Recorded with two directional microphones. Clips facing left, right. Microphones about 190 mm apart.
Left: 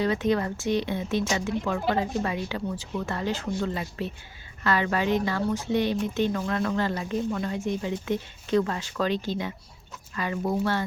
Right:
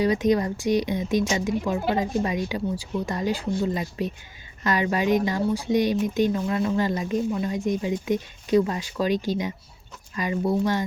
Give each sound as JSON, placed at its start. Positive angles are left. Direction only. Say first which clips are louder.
{"t": 0.0, "sound": "speech", "louder": "right 3 dB", "side_deg": -15}